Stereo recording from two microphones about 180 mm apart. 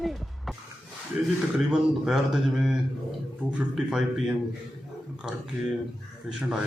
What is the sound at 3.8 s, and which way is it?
Speech, 5° right (ahead or behind).